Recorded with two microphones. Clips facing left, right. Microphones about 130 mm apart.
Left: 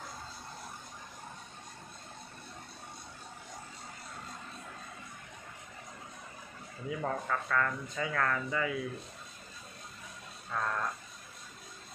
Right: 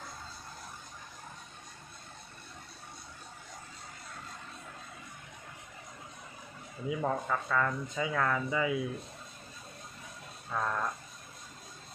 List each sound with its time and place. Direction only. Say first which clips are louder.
6.9 s speech: right 2 dB; 10° right (ahead or behind)
10.5 s speech: right 1 dB; 10° right (ahead or behind)